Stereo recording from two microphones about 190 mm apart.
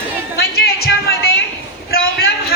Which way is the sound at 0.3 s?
55° left (ahead or behind).